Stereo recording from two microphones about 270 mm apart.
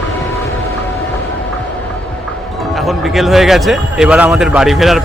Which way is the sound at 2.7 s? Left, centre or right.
Centre.